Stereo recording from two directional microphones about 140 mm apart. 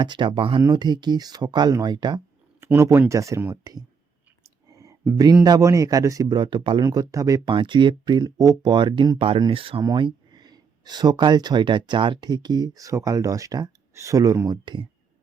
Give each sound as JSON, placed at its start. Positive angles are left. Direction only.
{"t": 0.0, "sound": "speech", "side_deg": -35}
{"t": 2.6, "sound": "speech", "side_deg": -20}